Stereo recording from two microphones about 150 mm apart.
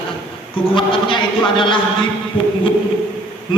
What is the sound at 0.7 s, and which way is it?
A man's voice, 35° left (ahead or behind).